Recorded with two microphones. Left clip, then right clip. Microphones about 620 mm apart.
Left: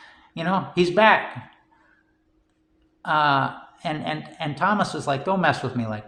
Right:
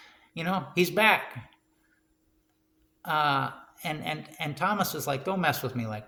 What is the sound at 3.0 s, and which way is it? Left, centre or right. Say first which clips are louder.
A man's voice: left 6 dB; right.